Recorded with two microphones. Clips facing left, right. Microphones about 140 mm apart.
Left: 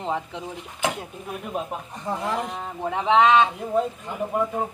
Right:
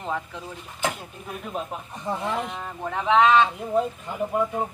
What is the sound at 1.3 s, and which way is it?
Speech, 10° left (ahead or behind).